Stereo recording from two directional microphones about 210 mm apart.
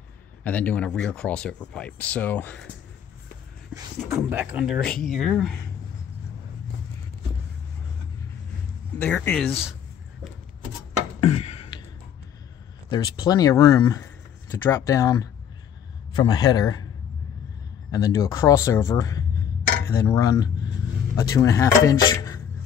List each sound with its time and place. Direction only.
0.4 s speech: 5° left (ahead or behind)
4.1 s speech: 10° right (ahead or behind)
8.9 s speech: 10° left (ahead or behind)
11.1 s a sound: 30° left (ahead or behind)
12.9 s speech: 20° left (ahead or behind)
17.9 s speech: 15° left (ahead or behind)